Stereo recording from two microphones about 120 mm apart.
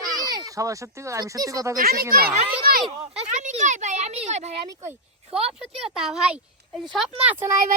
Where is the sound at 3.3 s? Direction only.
90° right; by 4.5 s 70° right (ahead or behind).